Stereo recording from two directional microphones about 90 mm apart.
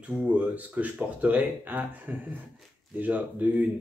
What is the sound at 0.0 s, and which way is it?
Speech, 15° right (ahead or behind).